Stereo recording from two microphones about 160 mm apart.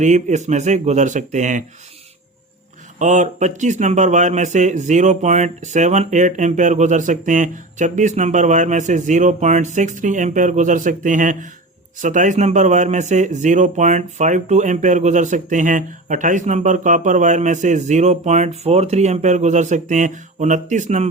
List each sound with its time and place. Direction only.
0.0 s speech: 50° right (ahead or behind)
3.0 s speech: 50° right (ahead or behind)